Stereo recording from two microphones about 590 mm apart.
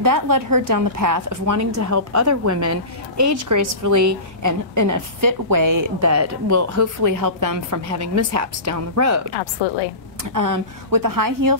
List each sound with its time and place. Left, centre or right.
0.0 s a woman's voice: right
9.4 s a woman's voice: left
10.3 s a woman's voice: right